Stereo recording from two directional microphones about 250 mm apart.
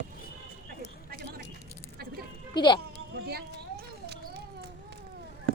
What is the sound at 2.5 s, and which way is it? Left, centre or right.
Speech, centre.